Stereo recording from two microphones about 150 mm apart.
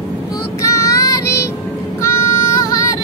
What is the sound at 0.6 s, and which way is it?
Child singing, 20° left (ahead or behind).